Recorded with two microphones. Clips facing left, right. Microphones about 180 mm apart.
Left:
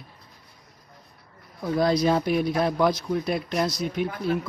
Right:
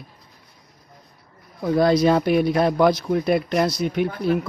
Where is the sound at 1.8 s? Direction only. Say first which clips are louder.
Right 4 dB; 65° right (ahead or behind).